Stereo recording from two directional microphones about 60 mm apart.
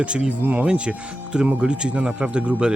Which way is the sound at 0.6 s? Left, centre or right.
Centre.